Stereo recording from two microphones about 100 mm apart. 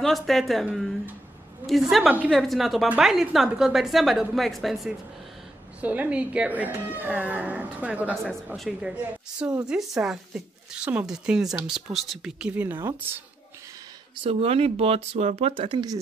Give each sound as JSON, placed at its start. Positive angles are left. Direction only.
{"t": 0.0, "sound": "speech", "side_deg": 0}
{"t": 2.0, "sound": "speech", "side_deg": -10}
{"t": 2.3, "sound": "speech", "side_deg": 0}
{"t": 5.8, "sound": "speech", "side_deg": -15}
{"t": 8.1, "sound": "speech", "side_deg": 0}
{"t": 14.2, "sound": "speech", "side_deg": -80}